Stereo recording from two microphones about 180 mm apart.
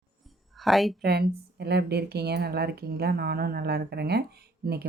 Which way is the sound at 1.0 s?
65° right (ahead or behind).